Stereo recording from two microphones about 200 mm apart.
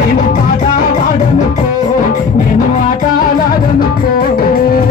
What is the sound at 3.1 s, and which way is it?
Music, 45° left (ahead or behind).